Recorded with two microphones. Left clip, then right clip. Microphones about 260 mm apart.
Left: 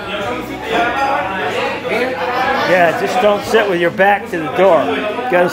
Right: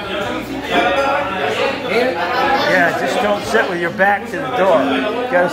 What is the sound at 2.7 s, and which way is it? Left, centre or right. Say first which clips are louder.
A man's voice: left 2 dB; left.